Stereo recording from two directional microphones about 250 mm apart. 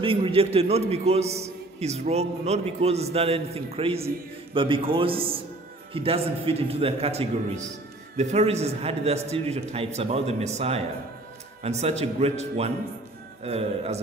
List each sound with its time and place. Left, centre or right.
0.0 s a man's voice: right